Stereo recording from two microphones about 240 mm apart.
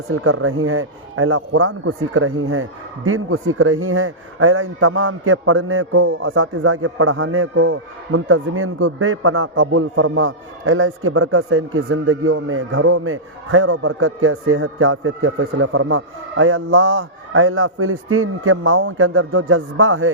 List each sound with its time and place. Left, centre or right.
0.1 s speech: right